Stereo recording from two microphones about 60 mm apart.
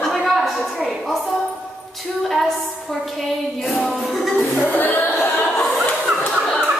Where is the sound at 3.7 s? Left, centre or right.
Centre.